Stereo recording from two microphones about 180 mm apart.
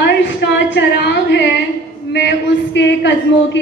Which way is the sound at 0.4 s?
75° left (ahead or behind).